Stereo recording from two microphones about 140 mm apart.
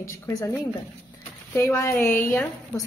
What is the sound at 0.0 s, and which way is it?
A woman's voice, 20° left (ahead or behind).